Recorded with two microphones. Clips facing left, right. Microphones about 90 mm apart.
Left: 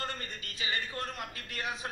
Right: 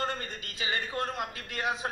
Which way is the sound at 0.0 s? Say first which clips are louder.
Right 5 dB; 25° right (ahead or behind).